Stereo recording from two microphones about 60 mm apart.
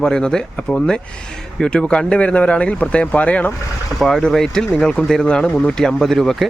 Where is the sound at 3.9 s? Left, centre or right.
Centre.